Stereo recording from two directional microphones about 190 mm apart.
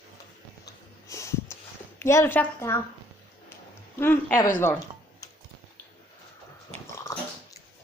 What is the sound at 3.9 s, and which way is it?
Speech, 10° left (ahead or behind).